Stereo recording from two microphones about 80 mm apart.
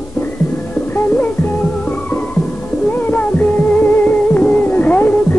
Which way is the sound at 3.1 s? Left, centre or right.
Left.